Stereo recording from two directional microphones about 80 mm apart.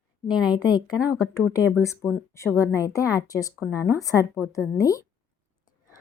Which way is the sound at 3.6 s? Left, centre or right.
Right.